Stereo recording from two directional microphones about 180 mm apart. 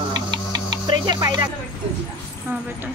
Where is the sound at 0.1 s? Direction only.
25° right (ahead or behind).